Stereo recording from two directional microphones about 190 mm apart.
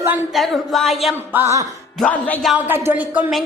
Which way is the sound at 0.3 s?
Centre (ahead or behind).